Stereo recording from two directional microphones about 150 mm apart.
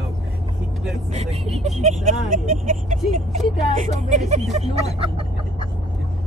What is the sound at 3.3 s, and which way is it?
Speech, 50° right (ahead or behind).